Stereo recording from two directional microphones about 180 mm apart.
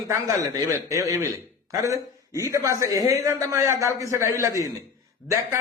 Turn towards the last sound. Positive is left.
turn(degrees=-15)  # may be behind; listen again after turning